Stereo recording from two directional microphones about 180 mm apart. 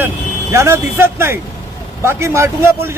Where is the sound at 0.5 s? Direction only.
15° right (ahead or behind).